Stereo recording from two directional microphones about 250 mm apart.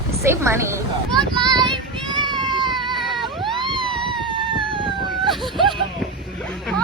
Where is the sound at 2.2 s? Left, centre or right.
Centre.